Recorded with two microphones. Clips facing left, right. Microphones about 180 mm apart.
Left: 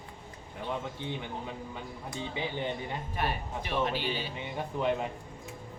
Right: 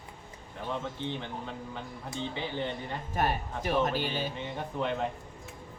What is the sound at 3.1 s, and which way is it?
Speech, 45° right (ahead or behind).